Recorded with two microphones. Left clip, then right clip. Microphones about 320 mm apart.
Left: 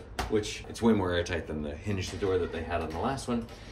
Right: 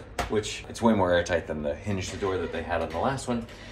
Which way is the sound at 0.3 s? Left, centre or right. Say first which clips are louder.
Left 1 dB; centre.